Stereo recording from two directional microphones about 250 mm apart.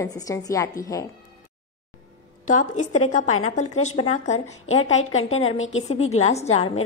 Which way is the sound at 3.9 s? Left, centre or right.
Left.